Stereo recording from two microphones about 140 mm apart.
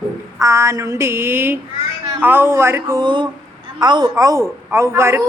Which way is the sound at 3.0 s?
35° right (ahead or behind).